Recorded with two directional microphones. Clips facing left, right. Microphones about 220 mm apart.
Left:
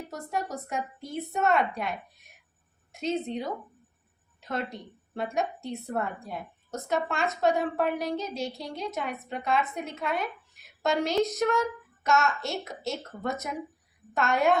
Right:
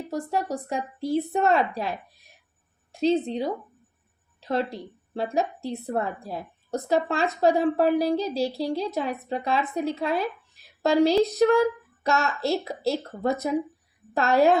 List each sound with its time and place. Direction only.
0.1 s a woman's voice: 30° right (ahead or behind)